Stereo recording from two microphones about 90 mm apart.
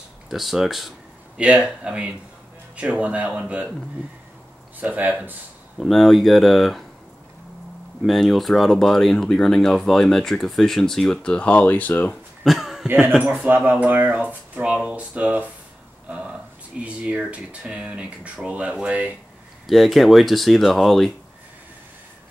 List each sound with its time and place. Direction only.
0.3 s speech: centre (ahead or behind)
4.7 s speech: 20° right (ahead or behind)
5.8 s speech: centre (ahead or behind)
8.0 s speech: centre (ahead or behind)
11.3 s speech: 15° left (ahead or behind)
12.4 s a sound: 5° right (ahead or behind)
13.2 s speech: 20° right (ahead or behind)
16.1 s a sound: 10° right (ahead or behind)
16.8 s speech: 15° right (ahead or behind)
19.6 s speech: centre (ahead or behind)